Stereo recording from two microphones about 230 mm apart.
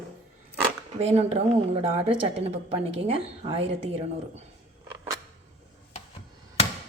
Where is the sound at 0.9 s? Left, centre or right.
Right.